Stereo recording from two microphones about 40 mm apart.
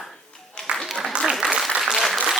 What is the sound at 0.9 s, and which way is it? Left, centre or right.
Applause, centre.